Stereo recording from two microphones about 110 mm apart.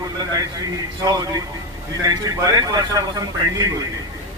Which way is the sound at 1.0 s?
35° right (ahead or behind).